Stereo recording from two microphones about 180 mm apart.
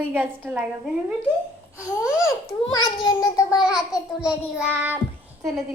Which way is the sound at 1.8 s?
5° right (ahead or behind).